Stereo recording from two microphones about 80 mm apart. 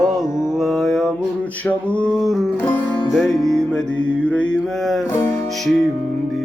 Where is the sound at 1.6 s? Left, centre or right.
Centre.